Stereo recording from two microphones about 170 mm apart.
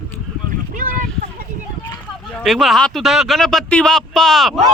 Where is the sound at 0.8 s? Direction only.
50° right (ahead or behind).